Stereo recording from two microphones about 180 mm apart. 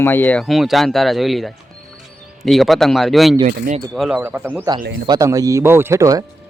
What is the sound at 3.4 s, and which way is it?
Speech, 50° right (ahead or behind).